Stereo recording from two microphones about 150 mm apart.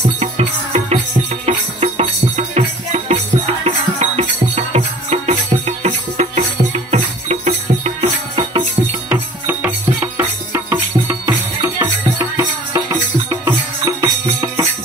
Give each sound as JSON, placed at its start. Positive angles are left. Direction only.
{"t": 0.2, "sound": "music", "side_deg": -45}
{"t": 9.1, "sound": "music", "side_deg": -10}